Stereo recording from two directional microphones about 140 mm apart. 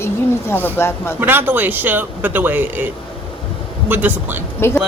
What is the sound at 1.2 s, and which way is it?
A man's voice, 15° right (ahead or behind).